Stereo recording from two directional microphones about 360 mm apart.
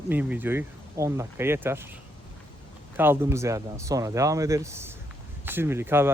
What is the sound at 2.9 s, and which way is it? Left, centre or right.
Speech, centre.